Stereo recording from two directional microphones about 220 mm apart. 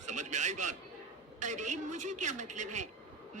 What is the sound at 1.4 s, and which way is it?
Speech, 35° right (ahead or behind).